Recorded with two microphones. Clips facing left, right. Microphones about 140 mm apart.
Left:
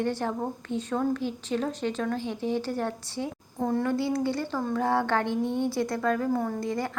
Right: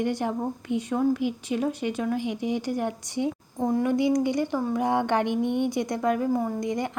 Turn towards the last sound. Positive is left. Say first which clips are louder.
# right 2 dB
turn(degrees=-20)  # may be behind; listen again after turning